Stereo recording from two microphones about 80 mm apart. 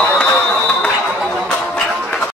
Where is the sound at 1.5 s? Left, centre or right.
Centre.